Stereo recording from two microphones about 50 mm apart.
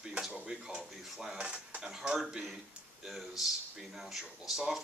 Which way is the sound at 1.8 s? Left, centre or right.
Centre.